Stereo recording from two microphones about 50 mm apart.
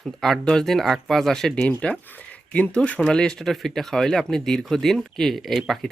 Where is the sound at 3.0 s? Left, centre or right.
Centre.